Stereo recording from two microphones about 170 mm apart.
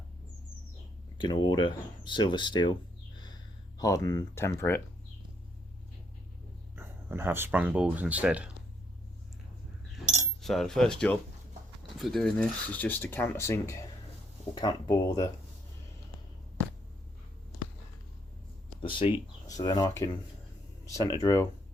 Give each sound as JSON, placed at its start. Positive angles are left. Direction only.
{"t": 1.2, "sound": "speech", "side_deg": 25}
{"t": 3.2, "sound": "a sound", "side_deg": 25}
{"t": 6.7, "sound": "speech", "side_deg": -15}
{"t": 10.4, "sound": "speech", "side_deg": 0}
{"t": 18.8, "sound": "speech", "side_deg": 30}